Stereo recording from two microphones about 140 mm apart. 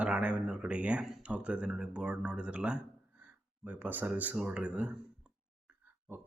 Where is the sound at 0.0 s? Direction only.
10° right (ahead or behind).